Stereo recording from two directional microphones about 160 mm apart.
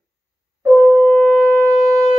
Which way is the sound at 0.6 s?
5° right (ahead or behind).